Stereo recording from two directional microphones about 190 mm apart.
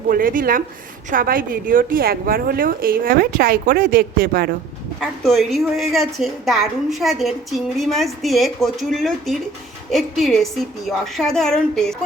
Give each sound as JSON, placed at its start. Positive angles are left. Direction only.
{"t": 0.1, "sound": "a woman's voice", "side_deg": -45}
{"t": 4.9, "sound": "a woman's voice", "side_deg": 0}